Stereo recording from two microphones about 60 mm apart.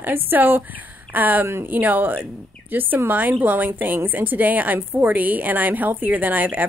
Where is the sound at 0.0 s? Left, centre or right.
Right.